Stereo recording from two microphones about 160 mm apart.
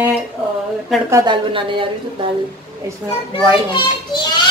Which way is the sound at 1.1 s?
30° right (ahead or behind).